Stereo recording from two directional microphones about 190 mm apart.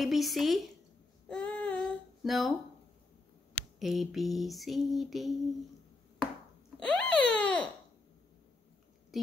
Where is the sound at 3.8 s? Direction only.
Centre (ahead or behind).